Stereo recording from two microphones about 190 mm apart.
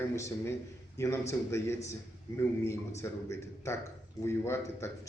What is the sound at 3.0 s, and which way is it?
A man's voice, 15° left (ahead or behind).